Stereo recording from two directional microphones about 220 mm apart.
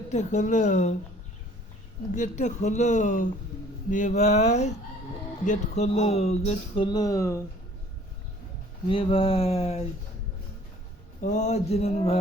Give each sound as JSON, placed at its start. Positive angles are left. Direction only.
{"t": 0.1, "sound": "speech", "side_deg": 30}
{"t": 2.1, "sound": "speech", "side_deg": 35}
{"t": 8.9, "sound": "speech", "side_deg": 25}
{"t": 11.2, "sound": "speech", "side_deg": 35}